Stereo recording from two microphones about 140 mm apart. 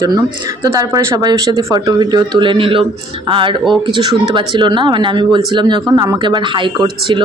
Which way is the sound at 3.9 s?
35° right (ahead or behind).